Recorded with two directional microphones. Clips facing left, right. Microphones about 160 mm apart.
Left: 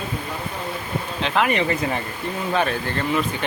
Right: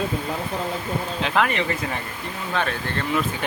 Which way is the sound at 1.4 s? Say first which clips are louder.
Left 1 dB; centre (ahead or behind).